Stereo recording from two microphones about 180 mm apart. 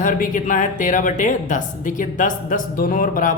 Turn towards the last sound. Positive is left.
turn(degrees=50)  # may be behind; listen again after turning